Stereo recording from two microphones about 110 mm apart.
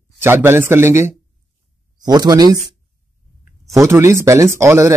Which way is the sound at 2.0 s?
35° right (ahead or behind).